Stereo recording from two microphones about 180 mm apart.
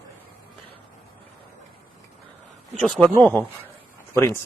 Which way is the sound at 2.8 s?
5° left (ahead or behind).